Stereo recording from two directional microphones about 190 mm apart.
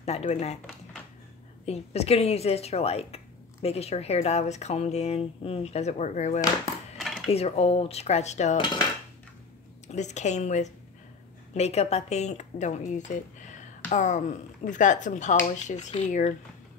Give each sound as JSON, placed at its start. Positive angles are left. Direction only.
{"t": 0.0, "sound": "speech", "side_deg": 35}
{"t": 1.7, "sound": "speech", "side_deg": 35}
{"t": 7.0, "sound": "dishes", "side_deg": 0}
{"t": 7.2, "sound": "speech", "side_deg": 35}
{"t": 9.8, "sound": "speech", "side_deg": 35}